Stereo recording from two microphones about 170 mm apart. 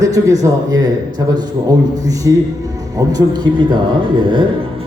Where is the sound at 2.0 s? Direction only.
20° right (ahead or behind).